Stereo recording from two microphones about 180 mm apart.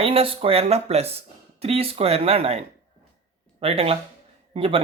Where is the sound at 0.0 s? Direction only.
30° right (ahead or behind).